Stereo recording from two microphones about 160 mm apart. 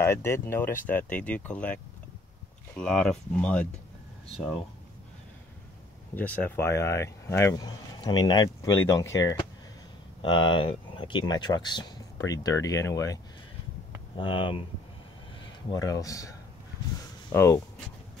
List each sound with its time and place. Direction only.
0.0 s speech: 15° left (ahead or behind)
6.1 s speech: 10° left (ahead or behind)
14.1 s speech: 30° left (ahead or behind)
15.7 s speech: 20° left (ahead or behind)